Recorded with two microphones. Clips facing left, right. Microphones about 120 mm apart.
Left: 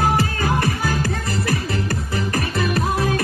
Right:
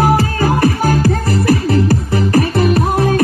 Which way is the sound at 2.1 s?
35° right (ahead or behind).